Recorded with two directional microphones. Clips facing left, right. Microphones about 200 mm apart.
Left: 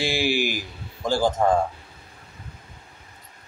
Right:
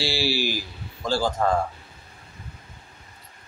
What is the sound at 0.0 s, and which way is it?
Speech, 15° left (ahead or behind).